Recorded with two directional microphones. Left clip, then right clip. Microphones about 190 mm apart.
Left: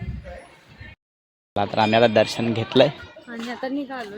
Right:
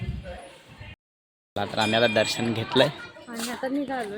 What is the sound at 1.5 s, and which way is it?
Speech, 35° left (ahead or behind).